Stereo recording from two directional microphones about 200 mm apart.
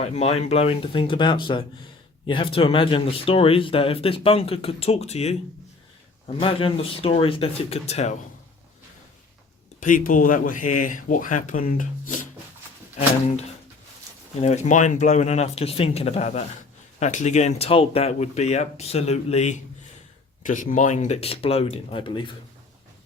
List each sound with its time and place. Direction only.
0.0 s speech: 30° left (ahead or behind)
9.8 s speech: 40° left (ahead or behind)
14.4 s speech: 35° left (ahead or behind)